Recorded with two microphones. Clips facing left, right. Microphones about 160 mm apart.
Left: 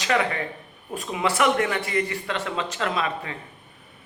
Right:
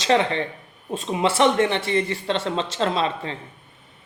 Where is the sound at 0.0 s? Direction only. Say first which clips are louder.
Right 4 dB; 25° right (ahead or behind).